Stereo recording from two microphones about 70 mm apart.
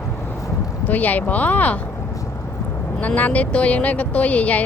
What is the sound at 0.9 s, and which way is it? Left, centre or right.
Speech, left.